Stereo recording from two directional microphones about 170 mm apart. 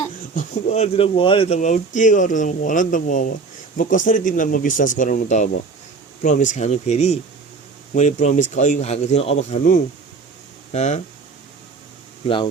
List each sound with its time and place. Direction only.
0.3 s speech: 45° left (ahead or behind)